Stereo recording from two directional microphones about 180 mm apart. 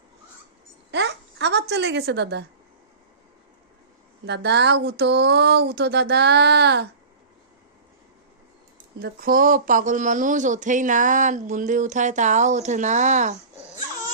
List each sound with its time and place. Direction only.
0.9 s a sound: 75° right (ahead or behind)
4.3 s speech: 70° right (ahead or behind)
9.0 s speech: 60° right (ahead or behind); by 13.3 s 40° right (ahead or behind)